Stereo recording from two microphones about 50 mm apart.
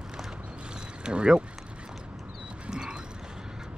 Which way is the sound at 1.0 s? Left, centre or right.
Centre.